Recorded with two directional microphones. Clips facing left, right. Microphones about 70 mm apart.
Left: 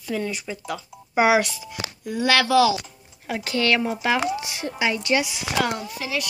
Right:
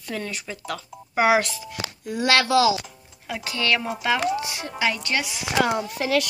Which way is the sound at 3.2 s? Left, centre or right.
Left.